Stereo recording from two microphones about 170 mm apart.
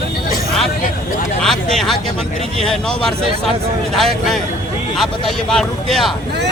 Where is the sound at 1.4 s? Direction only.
5° left (ahead or behind).